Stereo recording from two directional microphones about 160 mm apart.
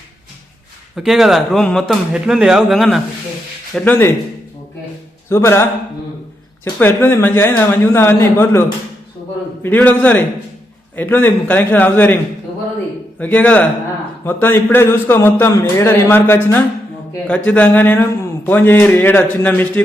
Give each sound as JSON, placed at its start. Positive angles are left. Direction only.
{"t": 0.9, "sound": "speech", "side_deg": 0}
{"t": 3.8, "sound": "speech", "side_deg": 10}
{"t": 5.3, "sound": "speech", "side_deg": 15}
{"t": 6.7, "sound": "speech", "side_deg": 15}
{"t": 9.6, "sound": "speech", "side_deg": 10}